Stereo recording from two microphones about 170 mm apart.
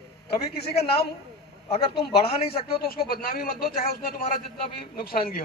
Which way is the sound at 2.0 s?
65° left (ahead or behind).